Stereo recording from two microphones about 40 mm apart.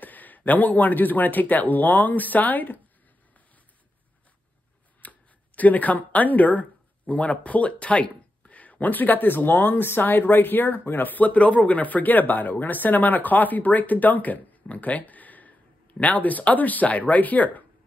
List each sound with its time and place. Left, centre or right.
0.0 s speech: left
5.0 s a sound: left
5.6 s speech: left